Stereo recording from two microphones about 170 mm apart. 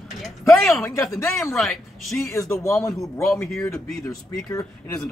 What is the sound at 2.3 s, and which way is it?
Speech, 15° left (ahead or behind).